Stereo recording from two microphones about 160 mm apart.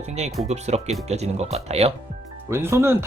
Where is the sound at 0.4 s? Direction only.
45° right (ahead or behind).